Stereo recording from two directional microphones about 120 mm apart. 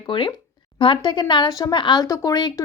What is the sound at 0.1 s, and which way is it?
A woman's voice, 40° left (ahead or behind).